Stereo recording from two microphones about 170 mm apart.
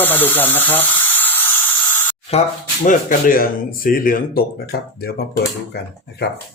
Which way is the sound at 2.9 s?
55° left (ahead or behind).